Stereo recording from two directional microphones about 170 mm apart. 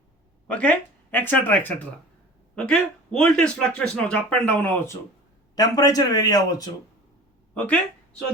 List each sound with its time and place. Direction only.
0.5 s speech: 10° left (ahead or behind)
5.5 s speech: 20° left (ahead or behind)
7.5 s speech: 10° left (ahead or behind)